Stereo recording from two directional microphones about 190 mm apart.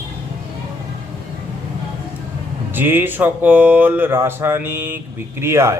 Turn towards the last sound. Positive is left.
turn(degrees=-15)  # may be behind; listen again after turning